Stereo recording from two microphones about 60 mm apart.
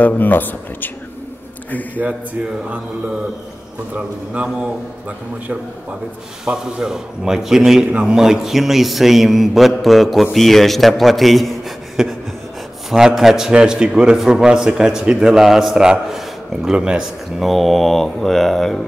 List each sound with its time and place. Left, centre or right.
0.0 s speech: left
3.9 s a man's voice: right
6.4 s a man's voice: centre
13.5 s speech: centre
17.4 s a man's voice: centre